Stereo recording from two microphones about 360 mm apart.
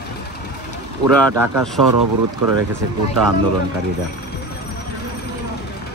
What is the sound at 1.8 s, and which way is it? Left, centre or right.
Speech, right.